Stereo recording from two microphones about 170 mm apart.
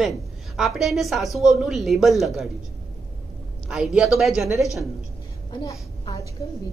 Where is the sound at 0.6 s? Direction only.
Centre (ahead or behind).